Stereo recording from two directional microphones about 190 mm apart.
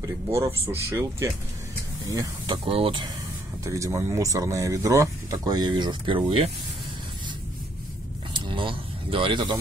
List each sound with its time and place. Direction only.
0.0 s speech: 15° right (ahead or behind)
3.6 s speech: 15° right (ahead or behind)
8.3 s a sound: 25° right (ahead or behind)